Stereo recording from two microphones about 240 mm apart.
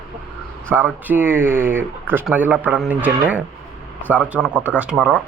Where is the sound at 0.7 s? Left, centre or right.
Centre.